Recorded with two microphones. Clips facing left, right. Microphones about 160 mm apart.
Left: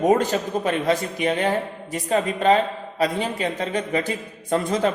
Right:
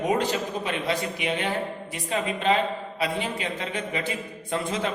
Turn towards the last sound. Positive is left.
turn(degrees=40)  # may be behind; listen again after turning